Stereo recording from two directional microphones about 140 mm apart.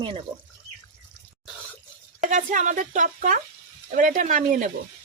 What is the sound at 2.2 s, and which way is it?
Speech, 60° right (ahead or behind).